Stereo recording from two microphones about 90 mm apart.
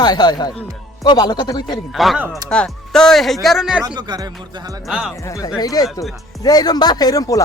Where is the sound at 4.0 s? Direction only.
50° right (ahead or behind).